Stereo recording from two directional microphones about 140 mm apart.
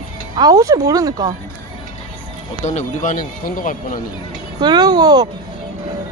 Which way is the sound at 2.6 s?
60° left (ahead or behind).